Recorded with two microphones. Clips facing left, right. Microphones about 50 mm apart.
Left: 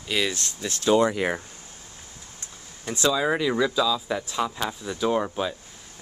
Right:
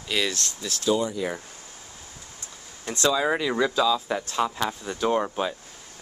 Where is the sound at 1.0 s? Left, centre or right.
Left.